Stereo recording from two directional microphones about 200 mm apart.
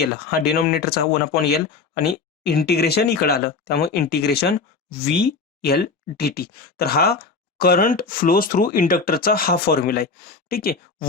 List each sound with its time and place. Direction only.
0.0 s speech: 50° left (ahead or behind)